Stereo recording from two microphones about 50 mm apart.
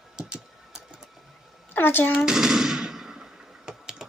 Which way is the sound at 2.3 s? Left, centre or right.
Centre.